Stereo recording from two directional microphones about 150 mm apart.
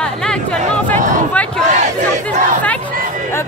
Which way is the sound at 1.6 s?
50° right (ahead or behind).